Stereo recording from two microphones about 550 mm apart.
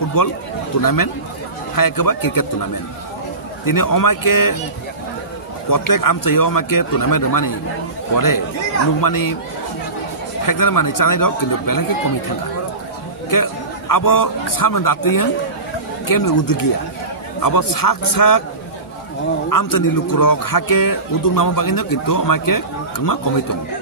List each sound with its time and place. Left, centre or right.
0.2 s a man's voice: left
3.6 s a man's voice: left
5.7 s a man's voice: left
9.0 s a man's voice: left
10.4 s a man's voice: left
13.3 s a man's voice: left
19.5 s a man's voice: left